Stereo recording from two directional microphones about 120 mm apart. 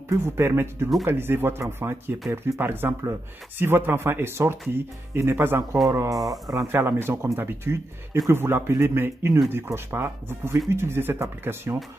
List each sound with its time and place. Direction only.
0.1 s speech: 20° right (ahead or behind)